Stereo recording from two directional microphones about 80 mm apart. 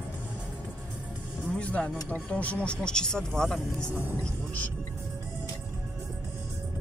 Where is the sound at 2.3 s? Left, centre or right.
Centre.